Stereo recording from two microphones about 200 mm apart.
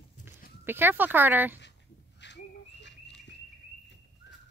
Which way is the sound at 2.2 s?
60° left (ahead or behind).